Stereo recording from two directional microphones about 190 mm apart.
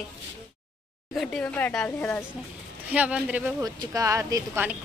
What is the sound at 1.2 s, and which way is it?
Speech, 5° left (ahead or behind).